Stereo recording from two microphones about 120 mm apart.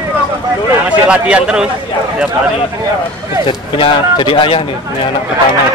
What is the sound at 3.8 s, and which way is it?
Speech, 45° left (ahead or behind).